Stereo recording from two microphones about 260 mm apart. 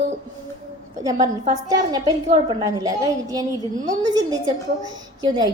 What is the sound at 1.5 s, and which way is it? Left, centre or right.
A woman's voice, centre.